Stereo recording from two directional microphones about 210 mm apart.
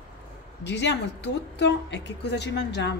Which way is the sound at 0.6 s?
55° left (ahead or behind).